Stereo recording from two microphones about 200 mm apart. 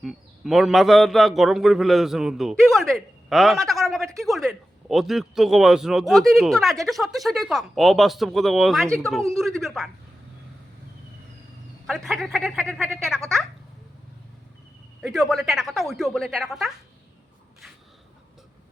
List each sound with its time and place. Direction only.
0.0 s a man's voice: centre (ahead or behind)
11.9 s a man's voice: centre (ahead or behind)
15.0 s a man's voice: centre (ahead or behind)